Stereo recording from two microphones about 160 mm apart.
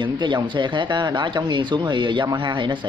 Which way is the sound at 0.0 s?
30° right (ahead or behind).